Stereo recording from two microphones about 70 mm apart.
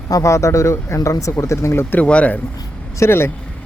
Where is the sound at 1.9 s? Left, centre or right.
Centre.